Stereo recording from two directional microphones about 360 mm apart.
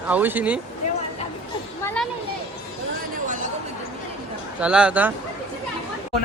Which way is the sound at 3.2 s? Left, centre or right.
Right.